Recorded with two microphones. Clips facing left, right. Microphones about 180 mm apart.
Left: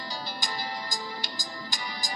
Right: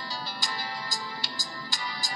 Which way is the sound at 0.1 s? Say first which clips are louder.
Left 1 dB; 15° left (ahead or behind).